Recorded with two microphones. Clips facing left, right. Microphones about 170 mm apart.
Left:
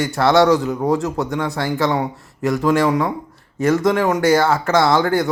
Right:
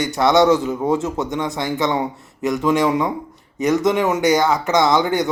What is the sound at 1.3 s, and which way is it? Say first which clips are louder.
Speech: left 1 dB; 20° right (ahead or behind).